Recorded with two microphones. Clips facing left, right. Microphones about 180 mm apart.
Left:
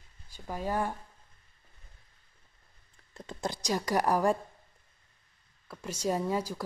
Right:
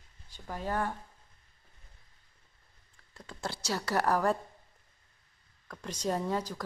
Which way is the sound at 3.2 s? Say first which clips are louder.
Left 4 dB; 20° left (ahead or behind).